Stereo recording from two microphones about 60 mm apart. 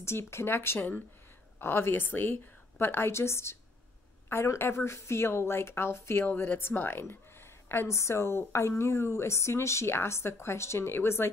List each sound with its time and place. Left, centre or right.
0.0 s speech: left
0.7 s speech: left
1.6 s speech: left
6.2 s speech: left